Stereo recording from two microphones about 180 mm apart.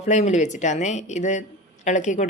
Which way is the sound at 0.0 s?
40° left (ahead or behind).